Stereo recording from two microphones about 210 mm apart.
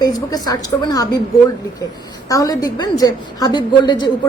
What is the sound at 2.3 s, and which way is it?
A woman's voice, 15° left (ahead or behind).